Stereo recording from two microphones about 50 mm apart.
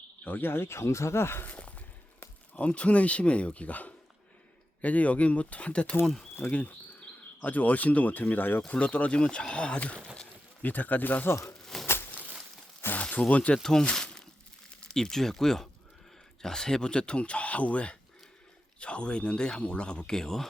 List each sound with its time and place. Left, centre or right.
0.3 s speech: left
1.5 s a sound: left
2.6 s speech: left
8.6 s speech: left
10.6 s speech: left
11.6 s a sound: centre
13.0 s speech: left
13.6 s speech: centre
13.9 s a sound: centre
14.8 s speech: centre